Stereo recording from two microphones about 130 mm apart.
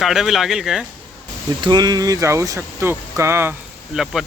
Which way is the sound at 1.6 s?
35° right (ahead or behind).